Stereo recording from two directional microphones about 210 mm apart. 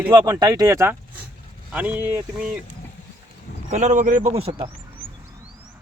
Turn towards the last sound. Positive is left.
turn(degrees=-30)  # may be behind; listen again after turning